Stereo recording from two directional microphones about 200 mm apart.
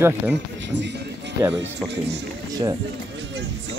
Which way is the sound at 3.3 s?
60° right (ahead or behind).